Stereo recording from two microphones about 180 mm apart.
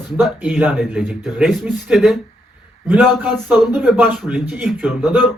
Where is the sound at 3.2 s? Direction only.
10° right (ahead or behind).